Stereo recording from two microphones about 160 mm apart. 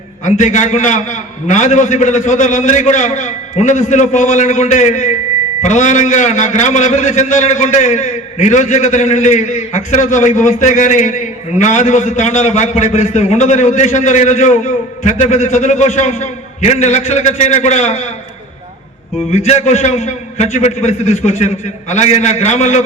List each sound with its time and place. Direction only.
0.3 s a man's voice: 50° left (ahead or behind)
19.5 s a man's voice: 45° left (ahead or behind)